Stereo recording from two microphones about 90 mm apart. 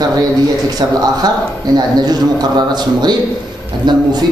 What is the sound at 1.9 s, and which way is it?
Speech, 50° right (ahead or behind).